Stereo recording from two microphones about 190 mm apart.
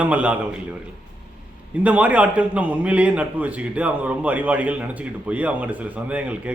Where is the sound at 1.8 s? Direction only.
5° right (ahead or behind).